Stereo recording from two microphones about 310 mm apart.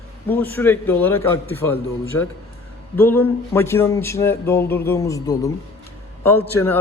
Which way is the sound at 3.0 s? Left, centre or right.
Centre.